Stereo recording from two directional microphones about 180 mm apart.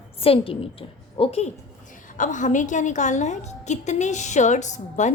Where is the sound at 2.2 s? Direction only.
45° left (ahead or behind).